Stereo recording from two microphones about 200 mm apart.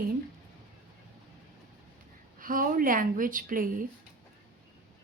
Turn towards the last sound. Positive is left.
turn(degrees=-45)  # may be behind; listen again after turning